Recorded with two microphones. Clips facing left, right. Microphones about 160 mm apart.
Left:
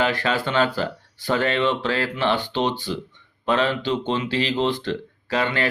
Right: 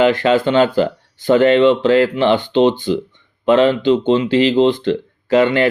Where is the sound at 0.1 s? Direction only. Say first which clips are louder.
Right 9 dB; 20° right (ahead or behind).